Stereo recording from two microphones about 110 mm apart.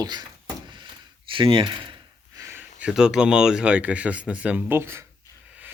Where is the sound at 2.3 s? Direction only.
25° right (ahead or behind).